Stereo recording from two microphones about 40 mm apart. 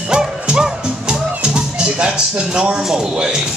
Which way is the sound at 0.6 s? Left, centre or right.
Right.